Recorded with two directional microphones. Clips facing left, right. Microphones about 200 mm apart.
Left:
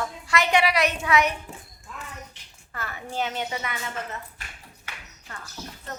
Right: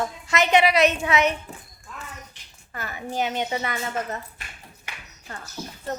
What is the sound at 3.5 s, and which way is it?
Speech, 35° right (ahead or behind).